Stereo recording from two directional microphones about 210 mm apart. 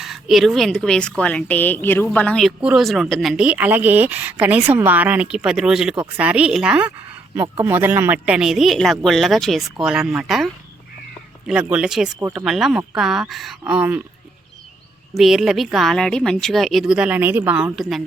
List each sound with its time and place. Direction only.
0.0 s speech: centre (ahead or behind)
7.3 s speech: 20° right (ahead or behind)
7.6 s speech: 10° right (ahead or behind)
15.1 s speech: centre (ahead or behind)